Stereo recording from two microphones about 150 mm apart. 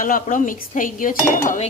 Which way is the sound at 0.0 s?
65° left (ahead or behind).